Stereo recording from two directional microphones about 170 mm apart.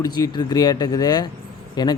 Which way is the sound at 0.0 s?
25° left (ahead or behind).